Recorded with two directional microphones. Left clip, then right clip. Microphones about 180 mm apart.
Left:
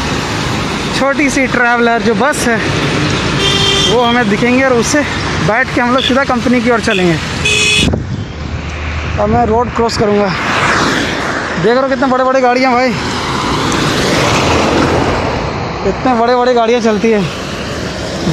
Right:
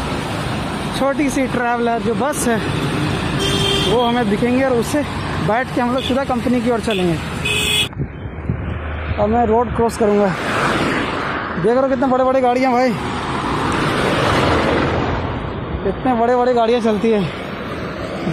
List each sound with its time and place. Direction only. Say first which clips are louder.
1.0 s speech: left 5 dB; 5° right (ahead or behind)
3.9 s speech: left 6 dB; centre (ahead or behind)
9.8 s a man's voice: left 4 dB; 15° right (ahead or behind)
10.4 s a sound: left 6 dB; 55° right (ahead or behind)
11.6 s a man's voice: left 4 dB; 10° right (ahead or behind)
16.1 s a man's voice: left 5 dB; 5° right (ahead or behind)